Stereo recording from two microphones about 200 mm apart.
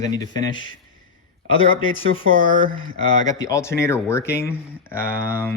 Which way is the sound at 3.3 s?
15° left (ahead or behind).